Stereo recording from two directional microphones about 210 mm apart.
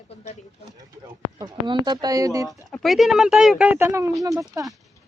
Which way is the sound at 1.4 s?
20° right (ahead or behind).